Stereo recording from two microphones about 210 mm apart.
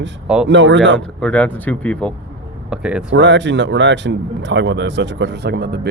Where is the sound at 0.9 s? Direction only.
5° left (ahead or behind).